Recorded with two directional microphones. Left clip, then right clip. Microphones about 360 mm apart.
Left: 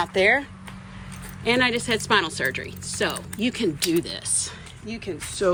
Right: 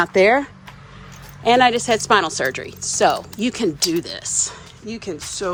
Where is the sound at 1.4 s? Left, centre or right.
Centre.